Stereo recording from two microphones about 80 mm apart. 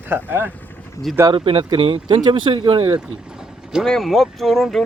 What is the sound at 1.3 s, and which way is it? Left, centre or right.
Speech, right.